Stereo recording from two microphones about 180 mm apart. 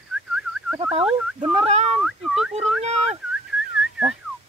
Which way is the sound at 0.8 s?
35° right (ahead or behind).